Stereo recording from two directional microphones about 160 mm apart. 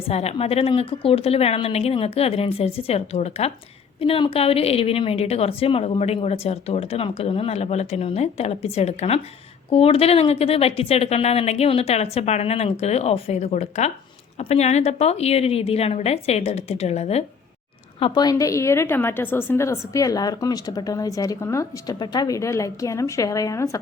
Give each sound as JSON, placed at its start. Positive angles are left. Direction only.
{"t": 0.1, "sound": "a woman's voice", "side_deg": 40}
{"t": 18.0, "sound": "a woman's voice", "side_deg": 25}